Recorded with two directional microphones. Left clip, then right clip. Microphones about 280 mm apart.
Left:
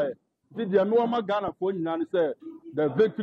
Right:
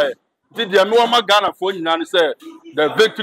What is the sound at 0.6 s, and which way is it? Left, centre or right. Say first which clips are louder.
A man's voice: right 9 dB; centre.